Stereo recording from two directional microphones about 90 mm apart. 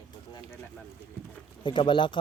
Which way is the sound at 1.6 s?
65° left (ahead or behind).